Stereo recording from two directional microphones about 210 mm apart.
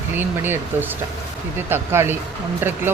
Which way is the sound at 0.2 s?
10° right (ahead or behind).